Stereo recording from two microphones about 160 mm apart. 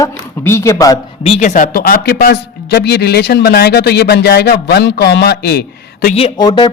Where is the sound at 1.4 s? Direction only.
55° left (ahead or behind); by 6.1 s 85° left.